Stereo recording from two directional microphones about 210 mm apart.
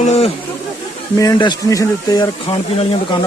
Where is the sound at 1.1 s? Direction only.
15° left (ahead or behind).